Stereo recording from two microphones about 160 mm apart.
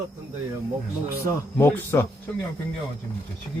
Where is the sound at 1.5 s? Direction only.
15° left (ahead or behind).